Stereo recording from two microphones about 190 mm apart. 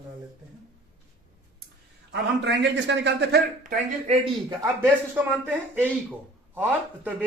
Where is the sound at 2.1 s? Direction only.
70° right (ahead or behind).